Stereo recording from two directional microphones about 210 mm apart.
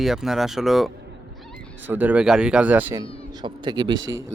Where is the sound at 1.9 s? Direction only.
10° right (ahead or behind).